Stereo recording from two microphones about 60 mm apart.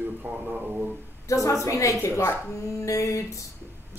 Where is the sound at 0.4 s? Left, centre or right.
Centre.